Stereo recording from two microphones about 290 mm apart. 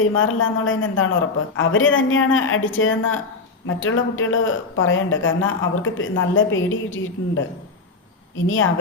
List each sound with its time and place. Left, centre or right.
0.0 s speech: left
8.4 s speech: left